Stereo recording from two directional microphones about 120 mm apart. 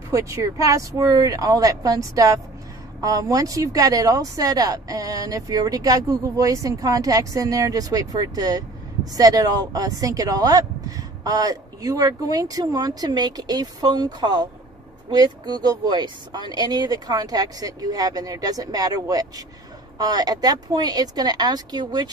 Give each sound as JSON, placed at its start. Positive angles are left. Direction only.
{"t": 0.1, "sound": "speech", "side_deg": -25}